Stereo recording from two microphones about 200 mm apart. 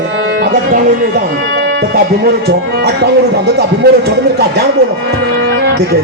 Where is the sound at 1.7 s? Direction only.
60° right (ahead or behind).